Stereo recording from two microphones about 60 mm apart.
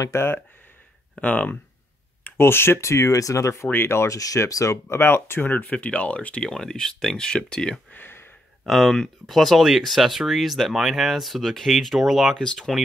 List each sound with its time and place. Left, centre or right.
0.0 s speech: left
1.2 s speech: left
2.2 s speech: left
3.7 s speech: left
4.1 s speech: left
4.8 s speech: left; by 7.7 s centre
7.9 s a sound: left
8.6 s speech: centre
12.4 s speech: centre